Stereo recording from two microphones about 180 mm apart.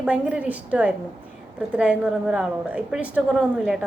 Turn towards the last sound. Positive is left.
turn(degrees=-5)  # may be behind; listen again after turning